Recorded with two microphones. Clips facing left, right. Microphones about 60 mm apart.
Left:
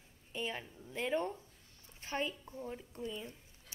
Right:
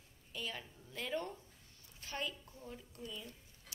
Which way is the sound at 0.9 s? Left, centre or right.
Left.